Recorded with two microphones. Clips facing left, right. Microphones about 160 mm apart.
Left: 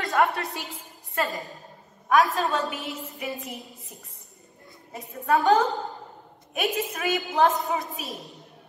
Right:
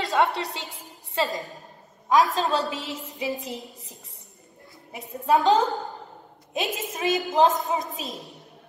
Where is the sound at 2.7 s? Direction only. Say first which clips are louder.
Right 1 dB; 90° right.